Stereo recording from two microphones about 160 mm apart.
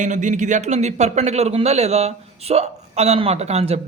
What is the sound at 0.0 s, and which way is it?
Speech, 50° right (ahead or behind).